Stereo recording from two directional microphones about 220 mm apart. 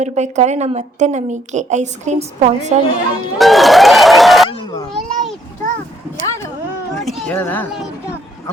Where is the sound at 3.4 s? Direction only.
Centre (ahead or behind).